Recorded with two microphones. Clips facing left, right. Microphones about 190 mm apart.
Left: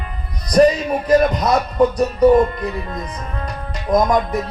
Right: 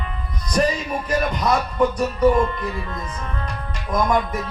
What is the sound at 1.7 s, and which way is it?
Speech, 35° left (ahead or behind).